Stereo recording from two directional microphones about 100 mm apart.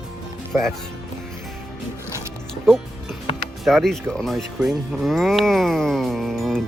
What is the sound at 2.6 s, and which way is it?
Music, 5° left (ahead or behind).